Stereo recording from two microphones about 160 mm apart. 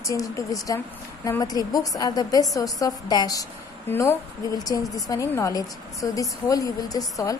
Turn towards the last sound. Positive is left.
turn(degrees=20)  # may be behind; listen again after turning